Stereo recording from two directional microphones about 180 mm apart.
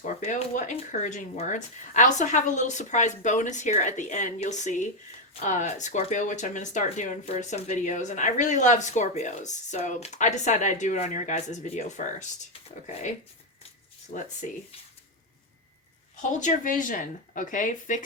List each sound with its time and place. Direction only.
0.0 s speech: 40° left (ahead or behind)
16.4 s speech: 50° left (ahead or behind)